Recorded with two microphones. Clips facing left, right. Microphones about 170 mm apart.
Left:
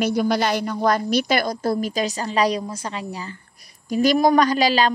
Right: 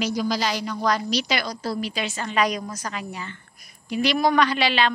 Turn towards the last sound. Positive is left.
turn(degrees=40)  # may be behind; listen again after turning